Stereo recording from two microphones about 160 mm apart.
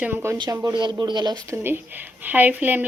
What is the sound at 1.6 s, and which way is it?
A woman's voice, 15° right (ahead or behind).